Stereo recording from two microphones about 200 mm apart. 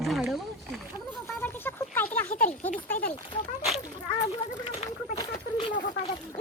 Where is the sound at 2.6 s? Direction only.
35° left (ahead or behind).